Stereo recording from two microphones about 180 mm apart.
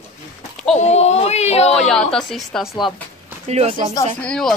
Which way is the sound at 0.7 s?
40° left (ahead or behind).